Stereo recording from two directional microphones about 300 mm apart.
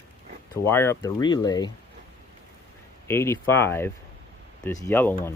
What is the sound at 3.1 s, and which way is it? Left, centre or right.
Speech, centre.